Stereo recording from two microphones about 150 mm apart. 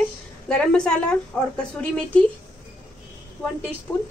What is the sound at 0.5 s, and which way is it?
Speech, 5° left (ahead or behind).